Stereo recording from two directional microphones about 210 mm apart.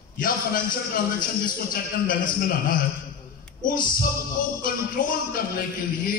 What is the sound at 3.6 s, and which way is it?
Music, 40° left (ahead or behind).